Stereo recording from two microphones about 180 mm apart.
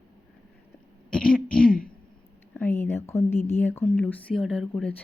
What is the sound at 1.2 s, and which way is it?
Throat clearing, 55° left (ahead or behind).